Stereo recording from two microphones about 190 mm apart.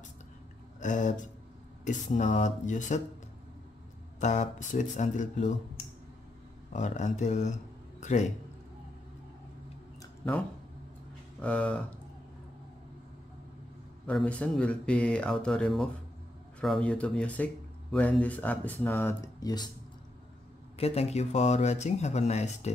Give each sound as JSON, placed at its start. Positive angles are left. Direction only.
{"t": 0.7, "sound": "speech", "side_deg": 40}
{"t": 4.2, "sound": "speech", "side_deg": 40}
{"t": 6.7, "sound": "speech", "side_deg": 40}
{"t": 11.4, "sound": "speech", "side_deg": 5}
{"t": 14.0, "sound": "speech", "side_deg": 5}
{"t": 20.7, "sound": "speech", "side_deg": 35}